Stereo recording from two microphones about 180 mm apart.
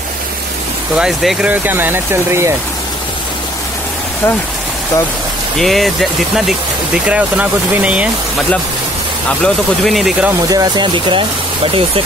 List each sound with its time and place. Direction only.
0.9 s speech: 5° right (ahead or behind)
5.6 s speech: centre (ahead or behind)
10.5 s speech: 20° right (ahead or behind)